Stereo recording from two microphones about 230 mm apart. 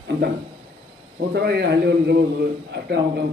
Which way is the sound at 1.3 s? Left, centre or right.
Right.